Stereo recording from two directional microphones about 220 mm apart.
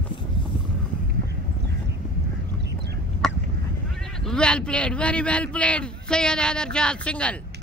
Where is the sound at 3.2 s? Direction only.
5° left (ahead or behind).